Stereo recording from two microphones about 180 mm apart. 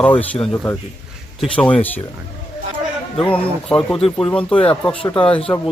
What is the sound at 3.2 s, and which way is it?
Speech, 5° left (ahead or behind).